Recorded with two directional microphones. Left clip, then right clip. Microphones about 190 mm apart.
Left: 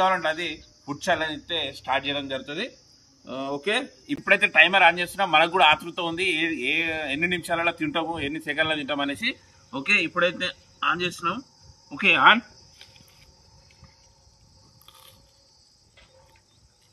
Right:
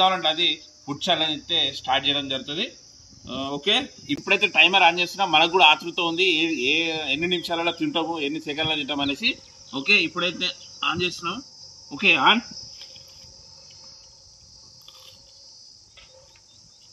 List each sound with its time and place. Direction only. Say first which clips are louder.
0.0 s a man's voice: right 3 dB; 10° left (ahead or behind)